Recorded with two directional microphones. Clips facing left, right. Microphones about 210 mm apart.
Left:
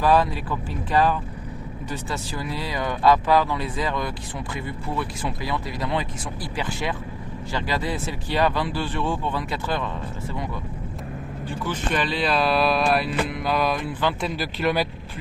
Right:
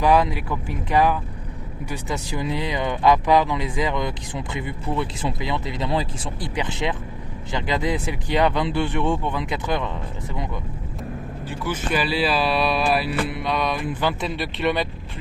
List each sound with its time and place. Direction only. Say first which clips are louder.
0.0 s speech: right 1 dB; 15° right (ahead or behind)
11.4 s speech: right 1 dB; 5° right (ahead or behind)